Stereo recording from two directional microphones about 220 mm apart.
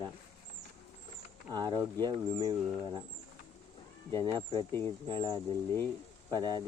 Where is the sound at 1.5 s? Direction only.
20° right (ahead or behind).